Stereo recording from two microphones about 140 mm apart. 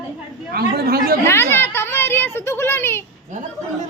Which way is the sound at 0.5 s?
90° right.